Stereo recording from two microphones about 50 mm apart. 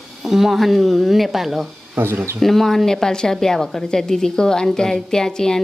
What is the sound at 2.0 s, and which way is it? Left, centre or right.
Speech, right.